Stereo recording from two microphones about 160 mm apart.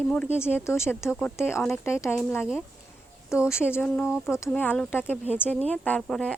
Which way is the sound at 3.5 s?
15° left (ahead or behind).